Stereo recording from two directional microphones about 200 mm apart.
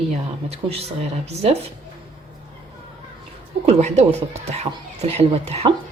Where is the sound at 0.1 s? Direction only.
30° right (ahead or behind).